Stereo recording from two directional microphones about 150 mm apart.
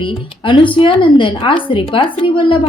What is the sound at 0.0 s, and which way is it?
A woman's voice, 35° left (ahead or behind).